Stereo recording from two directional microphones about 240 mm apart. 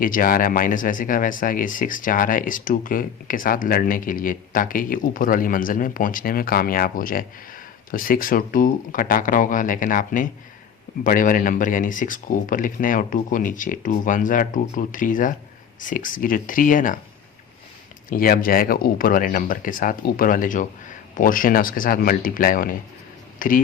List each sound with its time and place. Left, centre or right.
0.0 s speech: left
18.1 s speech: left